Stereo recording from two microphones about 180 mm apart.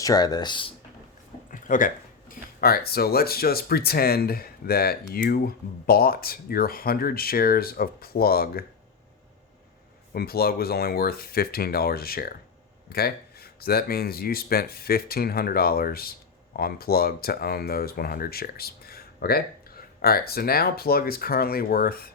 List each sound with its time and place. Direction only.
0.0 s speech: 20° left (ahead or behind)
1.5 s a sound: 45° left (ahead or behind)
2.3 s speech: 55° left (ahead or behind)
10.2 s speech: 60° left (ahead or behind)